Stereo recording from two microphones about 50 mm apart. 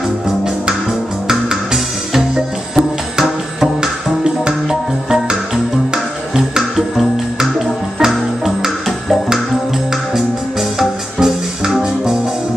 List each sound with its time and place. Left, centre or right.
1.2 s music: centre
7.3 s music: centre
10.8 s music: centre